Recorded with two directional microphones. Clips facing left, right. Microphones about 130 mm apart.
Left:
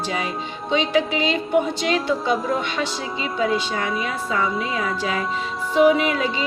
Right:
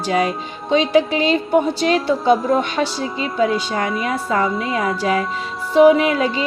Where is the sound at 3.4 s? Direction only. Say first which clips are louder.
Right 4 dB; 45° right (ahead or behind).